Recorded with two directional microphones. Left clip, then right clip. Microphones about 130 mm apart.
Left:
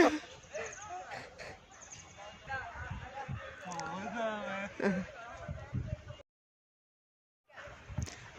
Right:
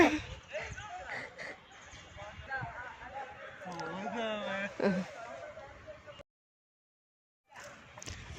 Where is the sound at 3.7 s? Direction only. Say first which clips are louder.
Right 1 dB; 15° left (ahead or behind).